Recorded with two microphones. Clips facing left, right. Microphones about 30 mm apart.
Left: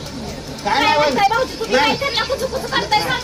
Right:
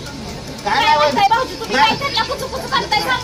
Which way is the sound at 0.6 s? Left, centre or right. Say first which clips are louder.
Right 2 dB; centre.